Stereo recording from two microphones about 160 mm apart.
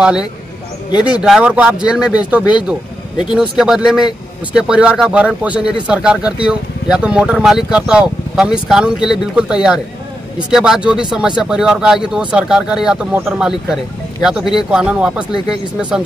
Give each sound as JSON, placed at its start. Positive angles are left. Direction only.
{"t": 1.0, "sound": "speech", "side_deg": -5}